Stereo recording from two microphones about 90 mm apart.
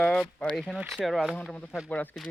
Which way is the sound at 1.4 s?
10° left (ahead or behind).